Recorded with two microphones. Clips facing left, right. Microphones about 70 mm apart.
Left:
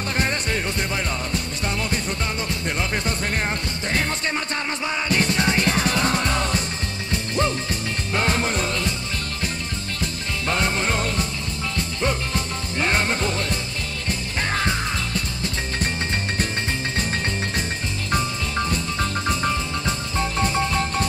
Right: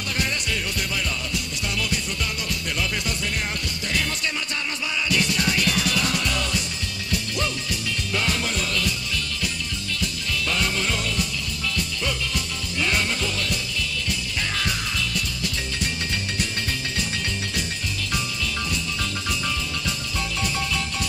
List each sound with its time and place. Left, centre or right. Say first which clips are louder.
0.2 s music: left 3 dB; left
5.1 s music: left 3 dB; left
10.4 s music: left 3 dB; left
18.1 s music: left 6 dB; left